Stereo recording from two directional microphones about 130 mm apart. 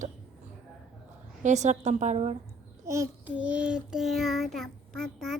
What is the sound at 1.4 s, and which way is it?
Speech, 65° right (ahead or behind).